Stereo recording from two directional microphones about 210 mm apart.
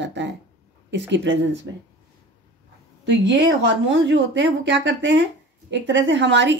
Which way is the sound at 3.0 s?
60° right (ahead or behind).